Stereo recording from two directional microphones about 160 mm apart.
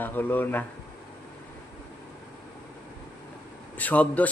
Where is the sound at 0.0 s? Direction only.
10° left (ahead or behind).